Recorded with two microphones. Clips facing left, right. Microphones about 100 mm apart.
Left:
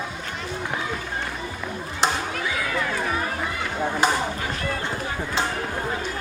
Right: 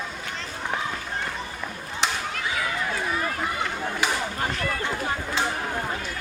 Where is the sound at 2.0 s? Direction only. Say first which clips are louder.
Left 4 dB; 35° left (ahead or behind).